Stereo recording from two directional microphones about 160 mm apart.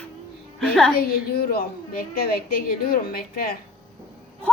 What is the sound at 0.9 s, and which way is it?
A woman's voice, 70° left (ahead or behind).